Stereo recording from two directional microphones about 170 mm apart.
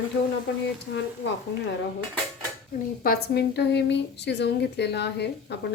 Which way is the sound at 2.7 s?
60° left (ahead or behind).